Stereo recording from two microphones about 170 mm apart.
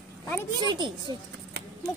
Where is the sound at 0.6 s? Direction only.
25° right (ahead or behind).